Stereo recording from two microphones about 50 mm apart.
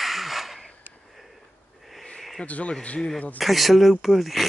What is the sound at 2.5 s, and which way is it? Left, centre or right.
Speech, left.